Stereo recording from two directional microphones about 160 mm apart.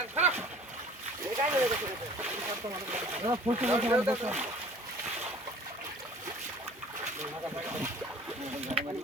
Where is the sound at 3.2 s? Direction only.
30° right (ahead or behind).